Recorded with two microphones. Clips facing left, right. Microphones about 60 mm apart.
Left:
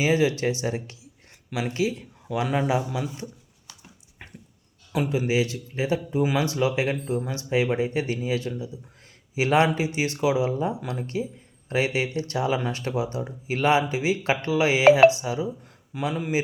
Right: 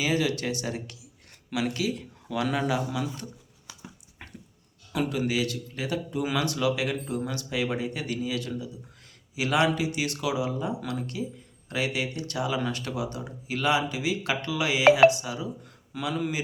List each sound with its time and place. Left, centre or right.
0.0 s speech: left
4.2 s dog: centre
4.9 s speech: centre